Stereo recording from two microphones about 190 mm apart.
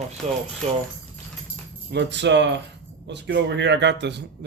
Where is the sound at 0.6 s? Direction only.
35° right (ahead or behind).